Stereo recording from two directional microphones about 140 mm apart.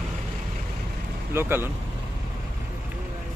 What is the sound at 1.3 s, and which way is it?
Speech, 15° right (ahead or behind).